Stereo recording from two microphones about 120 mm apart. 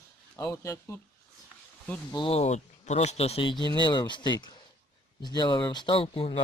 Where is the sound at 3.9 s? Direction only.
40° left (ahead or behind).